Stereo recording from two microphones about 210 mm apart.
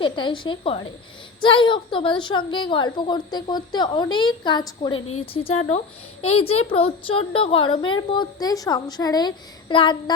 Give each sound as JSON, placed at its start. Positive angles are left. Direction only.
{"t": 0.0, "sound": "a woman's voice", "side_deg": 20}